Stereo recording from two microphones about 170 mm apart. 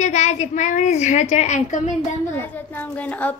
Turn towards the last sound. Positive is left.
turn(degrees=10)  # may be behind; listen again after turning